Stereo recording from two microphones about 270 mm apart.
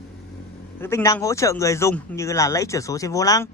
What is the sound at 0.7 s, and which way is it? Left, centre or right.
Speech, centre.